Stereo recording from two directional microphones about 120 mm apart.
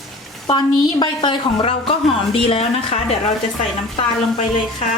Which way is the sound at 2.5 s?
60° left (ahead or behind).